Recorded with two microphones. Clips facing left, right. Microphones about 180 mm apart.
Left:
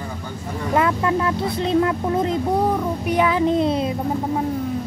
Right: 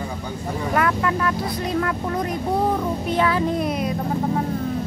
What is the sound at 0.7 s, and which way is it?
Speech, 25° left (ahead or behind).